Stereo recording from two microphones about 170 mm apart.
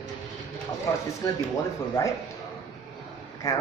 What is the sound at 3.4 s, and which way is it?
Speech, 20° left (ahead or behind).